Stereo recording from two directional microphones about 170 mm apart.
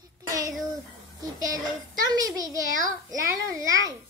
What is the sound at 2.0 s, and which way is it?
A child's voice, 20° right (ahead or behind).